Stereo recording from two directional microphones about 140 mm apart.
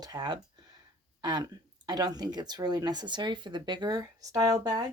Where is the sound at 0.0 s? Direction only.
30° right (ahead or behind).